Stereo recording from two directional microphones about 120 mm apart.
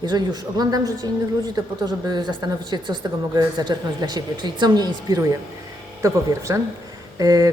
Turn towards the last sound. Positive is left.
turn(degrees=-30)  # may be behind; listen again after turning